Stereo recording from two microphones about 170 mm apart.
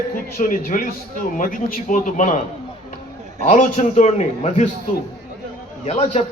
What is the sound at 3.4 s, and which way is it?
A man's voice, 45° left (ahead or behind).